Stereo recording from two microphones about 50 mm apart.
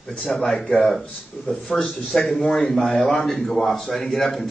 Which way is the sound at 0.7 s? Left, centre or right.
Centre.